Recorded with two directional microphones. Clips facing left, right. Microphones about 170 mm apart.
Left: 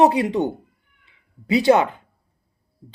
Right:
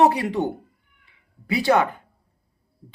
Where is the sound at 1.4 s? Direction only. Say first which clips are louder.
Left 4 dB; 20° left (ahead or behind).